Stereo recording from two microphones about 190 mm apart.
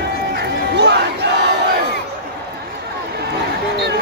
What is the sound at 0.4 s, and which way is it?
Run, 65° right (ahead or behind).